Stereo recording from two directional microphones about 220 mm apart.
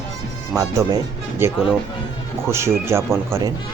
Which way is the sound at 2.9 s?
10° right (ahead or behind).